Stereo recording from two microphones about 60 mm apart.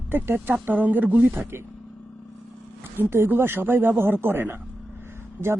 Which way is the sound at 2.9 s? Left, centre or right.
Right.